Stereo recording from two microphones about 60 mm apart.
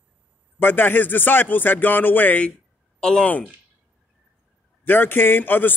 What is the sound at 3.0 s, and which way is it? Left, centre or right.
Speech, centre.